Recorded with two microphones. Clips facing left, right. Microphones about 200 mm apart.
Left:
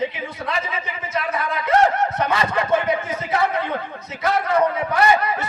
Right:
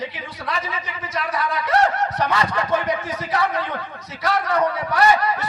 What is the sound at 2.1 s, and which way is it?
A man's voice, 25° left (ahead or behind).